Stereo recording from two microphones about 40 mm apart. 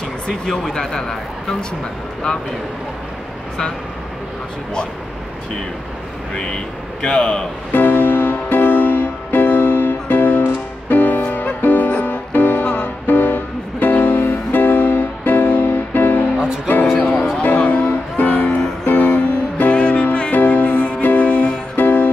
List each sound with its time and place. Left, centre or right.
0.3 s speech: centre
6.3 s speech: left
7.7 s music: left
17.0 s music: left
21.7 s music: left